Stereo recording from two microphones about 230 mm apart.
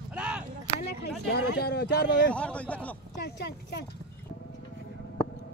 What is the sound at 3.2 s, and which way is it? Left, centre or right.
Speech, left.